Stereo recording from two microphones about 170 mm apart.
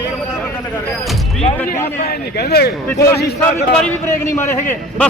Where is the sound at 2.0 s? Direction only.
70° left (ahead or behind).